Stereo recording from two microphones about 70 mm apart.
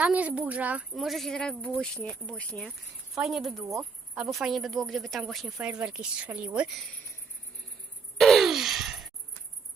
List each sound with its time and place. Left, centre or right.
0.0 s speech: right
0.9 s speech: centre
1.4 s speech: centre
3.2 s speech: centre
5.6 s speech: centre
8.2 s sigh: centre